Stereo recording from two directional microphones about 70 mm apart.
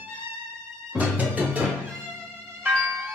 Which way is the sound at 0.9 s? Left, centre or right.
Right.